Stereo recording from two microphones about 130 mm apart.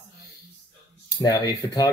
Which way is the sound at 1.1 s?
30° left (ahead or behind).